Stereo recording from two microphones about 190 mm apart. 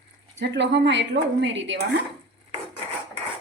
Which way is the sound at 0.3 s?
70° right (ahead or behind).